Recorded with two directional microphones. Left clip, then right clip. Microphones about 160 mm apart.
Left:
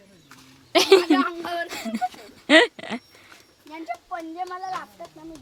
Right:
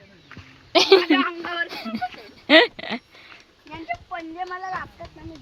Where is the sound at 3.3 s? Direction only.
15° left (ahead or behind).